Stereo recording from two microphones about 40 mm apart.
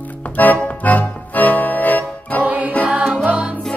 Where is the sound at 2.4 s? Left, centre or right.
Right.